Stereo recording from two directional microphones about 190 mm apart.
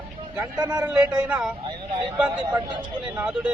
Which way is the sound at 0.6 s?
20° right (ahead or behind).